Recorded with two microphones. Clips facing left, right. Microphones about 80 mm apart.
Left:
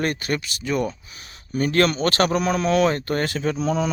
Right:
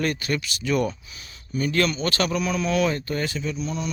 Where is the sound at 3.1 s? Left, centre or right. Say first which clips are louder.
Left 4 dB; left.